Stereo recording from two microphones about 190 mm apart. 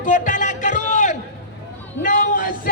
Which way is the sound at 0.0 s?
40° left (ahead or behind).